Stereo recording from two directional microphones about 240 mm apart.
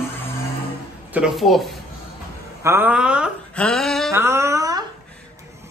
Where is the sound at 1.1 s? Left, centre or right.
Centre.